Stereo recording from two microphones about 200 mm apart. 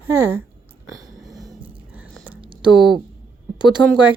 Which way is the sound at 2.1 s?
5° right (ahead or behind).